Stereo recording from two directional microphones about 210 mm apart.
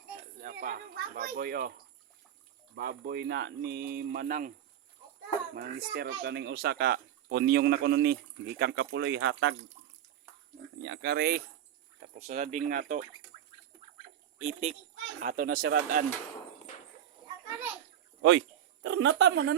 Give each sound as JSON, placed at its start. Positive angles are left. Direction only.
{"t": 0.3, "sound": "a sound", "side_deg": -40}
{"t": 2.7, "sound": "speech", "side_deg": -50}
{"t": 5.5, "sound": "speech", "side_deg": -50}
{"t": 10.8, "sound": "speech", "side_deg": -55}
{"t": 12.0, "sound": "speech", "side_deg": -35}
{"t": 13.3, "sound": "a sound", "side_deg": -25}
{"t": 14.4, "sound": "speech", "side_deg": -30}
{"t": 18.2, "sound": "speech", "side_deg": -65}